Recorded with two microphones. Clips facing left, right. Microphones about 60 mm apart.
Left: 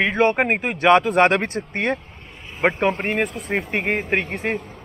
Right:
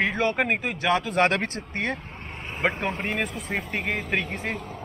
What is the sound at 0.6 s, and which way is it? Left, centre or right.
Speech, left.